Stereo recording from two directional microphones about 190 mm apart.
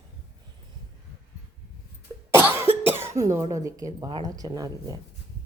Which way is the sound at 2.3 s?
15° right (ahead or behind).